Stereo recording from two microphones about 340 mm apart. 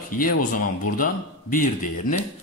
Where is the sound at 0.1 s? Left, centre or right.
Left.